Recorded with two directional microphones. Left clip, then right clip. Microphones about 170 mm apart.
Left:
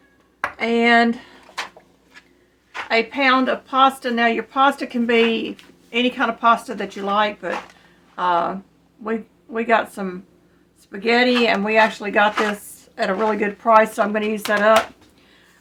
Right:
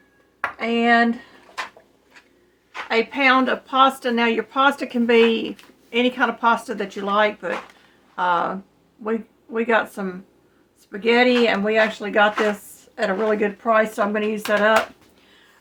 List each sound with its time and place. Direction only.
0.6 s speech: 25° left (ahead or behind)
2.9 s speech: 5° right (ahead or behind); by 14.7 s 10° left (ahead or behind)